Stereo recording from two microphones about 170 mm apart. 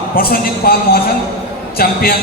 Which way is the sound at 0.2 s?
65° left (ahead or behind).